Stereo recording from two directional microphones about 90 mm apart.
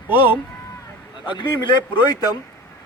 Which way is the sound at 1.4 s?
60° left (ahead or behind).